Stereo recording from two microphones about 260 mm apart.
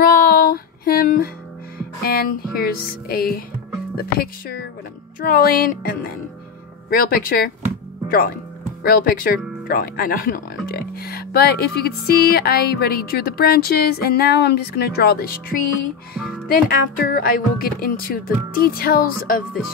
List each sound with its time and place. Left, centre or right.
0.0 s music: left
2.0 s speech: left
16.2 s music: centre
16.6 s speech: left